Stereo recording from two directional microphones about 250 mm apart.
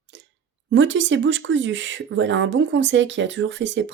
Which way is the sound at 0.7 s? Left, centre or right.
Right.